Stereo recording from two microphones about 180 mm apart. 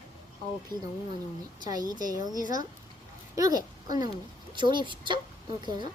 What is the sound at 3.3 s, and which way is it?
A child's voice, 20° right (ahead or behind).